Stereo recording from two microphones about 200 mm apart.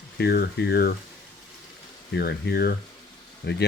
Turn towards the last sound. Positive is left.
turn(degrees=55)  # may be behind; listen again after turning